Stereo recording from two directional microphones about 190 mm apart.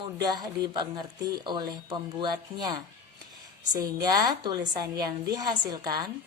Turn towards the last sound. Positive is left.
turn(degrees=-20)  # may be behind; listen again after turning